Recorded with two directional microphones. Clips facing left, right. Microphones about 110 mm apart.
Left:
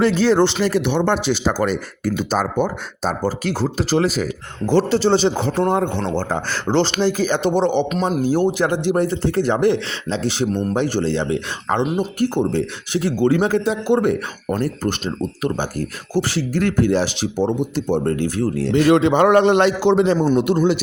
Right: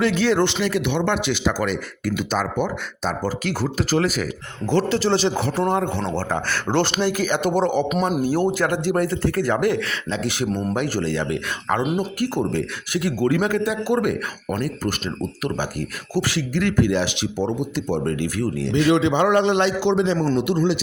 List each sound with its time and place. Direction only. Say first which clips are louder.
0.0 s speech: left 4 dB; 35° left (ahead or behind)
11.8 s speech: left 3 dB; 5° right (ahead or behind)
12.2 s a man's voice: left 6 dB; 25° left (ahead or behind); by 20.6 s 45° left (ahead or behind)